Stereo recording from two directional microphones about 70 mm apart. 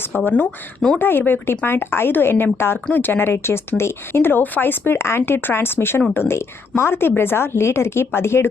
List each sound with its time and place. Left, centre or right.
0.1 s speech: left